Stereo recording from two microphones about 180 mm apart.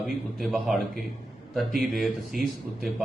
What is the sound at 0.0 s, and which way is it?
A man's voice, centre (ahead or behind).